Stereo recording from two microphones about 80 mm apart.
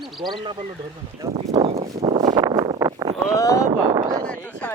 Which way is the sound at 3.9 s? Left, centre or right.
Right.